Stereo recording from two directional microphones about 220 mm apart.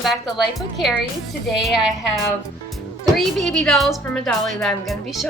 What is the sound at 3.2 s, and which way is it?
Speech, centre (ahead or behind).